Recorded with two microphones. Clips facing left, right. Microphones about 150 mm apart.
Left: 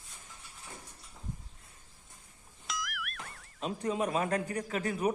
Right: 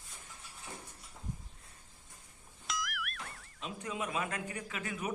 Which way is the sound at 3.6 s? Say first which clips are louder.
Left 7 dB; 40° left (ahead or behind).